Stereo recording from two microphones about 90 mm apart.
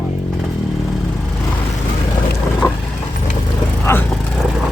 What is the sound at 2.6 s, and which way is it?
Vehicle, 30° left (ahead or behind).